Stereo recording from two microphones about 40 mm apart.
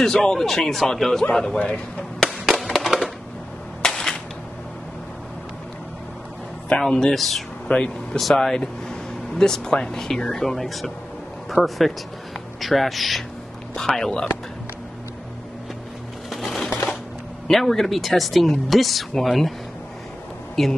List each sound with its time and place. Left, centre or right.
0.0 s a man's voice: centre
1.4 s a man's voice: left
2.2 s music: centre
2.6 s a sound: centre
3.8 s cap gun: centre
6.7 s a man's voice: centre
7.6 s a man's voice: left
8.4 s a man's voice: centre
13.7 s a man's voice: centre
16.3 s a sound: centre
17.5 s speech: centre
20.6 s speech: centre